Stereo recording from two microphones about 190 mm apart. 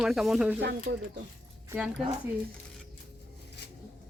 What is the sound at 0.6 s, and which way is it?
Speech, 60° right (ahead or behind).